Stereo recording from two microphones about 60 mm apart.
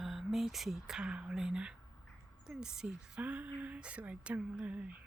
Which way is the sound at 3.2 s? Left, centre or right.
Right.